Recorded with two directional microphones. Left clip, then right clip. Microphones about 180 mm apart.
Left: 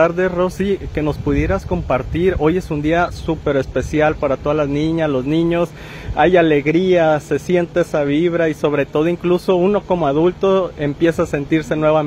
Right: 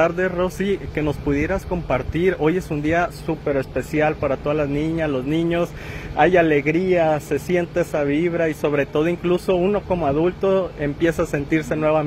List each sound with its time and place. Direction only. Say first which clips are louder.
0.0 s speech: left 4 dB; 40° left (ahead or behind)